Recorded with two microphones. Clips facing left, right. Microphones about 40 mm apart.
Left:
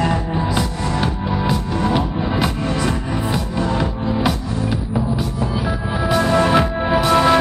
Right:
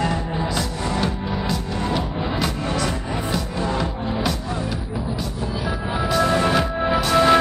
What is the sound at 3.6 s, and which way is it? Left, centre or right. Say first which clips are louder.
Music: left 4 dB; centre.